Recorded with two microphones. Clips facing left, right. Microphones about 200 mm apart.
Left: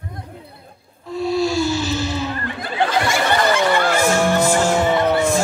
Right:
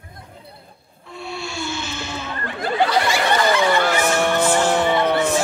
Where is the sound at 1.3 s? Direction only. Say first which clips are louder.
Left 10 dB; 40° left (ahead or behind).